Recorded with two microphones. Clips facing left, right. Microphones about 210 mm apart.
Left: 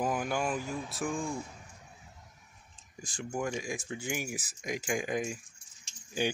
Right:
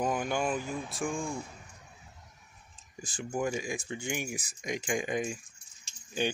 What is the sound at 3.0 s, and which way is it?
Speech, centre (ahead or behind).